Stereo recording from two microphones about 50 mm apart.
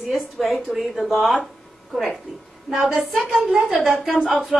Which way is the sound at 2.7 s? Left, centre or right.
Centre.